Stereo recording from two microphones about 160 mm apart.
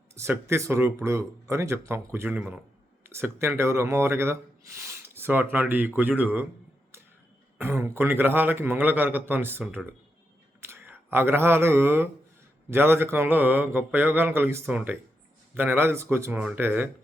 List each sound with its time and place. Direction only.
0.1 s speech: 15° right (ahead or behind)
6.9 s a sound: 15° right (ahead or behind)
7.6 s speech: 15° right (ahead or behind)